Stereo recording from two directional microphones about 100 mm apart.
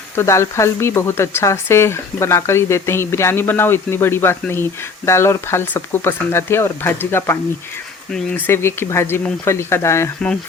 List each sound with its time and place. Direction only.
0.2 s speech: 30° left (ahead or behind)
8.4 s speech: 25° left (ahead or behind)